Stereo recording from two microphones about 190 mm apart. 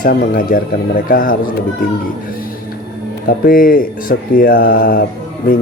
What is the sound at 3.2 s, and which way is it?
Speech, 50° left (ahead or behind).